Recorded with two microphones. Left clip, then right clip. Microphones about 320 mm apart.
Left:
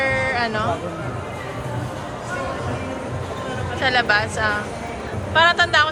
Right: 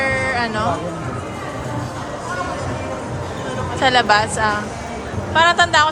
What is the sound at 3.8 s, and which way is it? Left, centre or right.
A woman's voice, centre.